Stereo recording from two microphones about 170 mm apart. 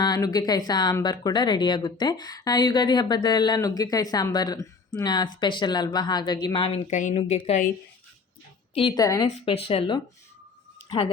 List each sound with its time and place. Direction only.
0.0 s speech: 25° left (ahead or behind)
8.7 s speech: 30° left (ahead or behind)
9.5 s speech: 35° left (ahead or behind)